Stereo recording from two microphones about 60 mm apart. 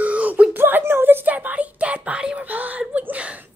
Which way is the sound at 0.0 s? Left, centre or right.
Right.